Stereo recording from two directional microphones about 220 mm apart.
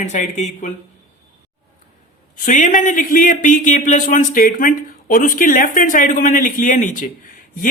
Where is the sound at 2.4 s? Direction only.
35° left (ahead or behind).